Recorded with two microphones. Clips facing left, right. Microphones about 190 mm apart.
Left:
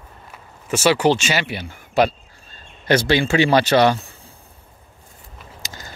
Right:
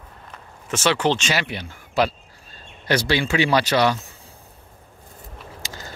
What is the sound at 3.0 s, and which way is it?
Speech, 25° left (ahead or behind).